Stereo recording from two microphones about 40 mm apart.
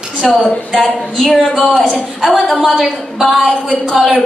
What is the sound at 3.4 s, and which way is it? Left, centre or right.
Speech, centre.